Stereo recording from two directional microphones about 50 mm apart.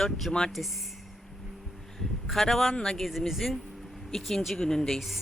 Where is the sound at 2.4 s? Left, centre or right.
Centre.